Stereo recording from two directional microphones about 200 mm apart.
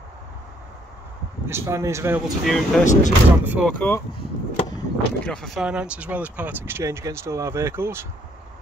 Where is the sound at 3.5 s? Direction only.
5° right (ahead or behind).